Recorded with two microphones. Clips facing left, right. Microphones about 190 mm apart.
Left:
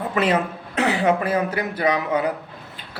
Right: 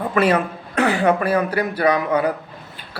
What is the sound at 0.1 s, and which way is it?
A man's voice, 20° left (ahead or behind).